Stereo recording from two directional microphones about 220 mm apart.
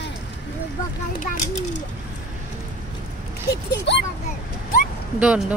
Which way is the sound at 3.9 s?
55° left (ahead or behind).